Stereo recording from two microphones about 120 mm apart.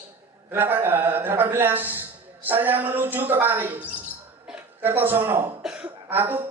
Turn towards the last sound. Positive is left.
turn(degrees=-15)  # may be behind; listen again after turning